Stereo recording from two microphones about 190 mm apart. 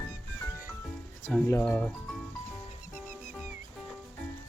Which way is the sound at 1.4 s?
10° left (ahead or behind).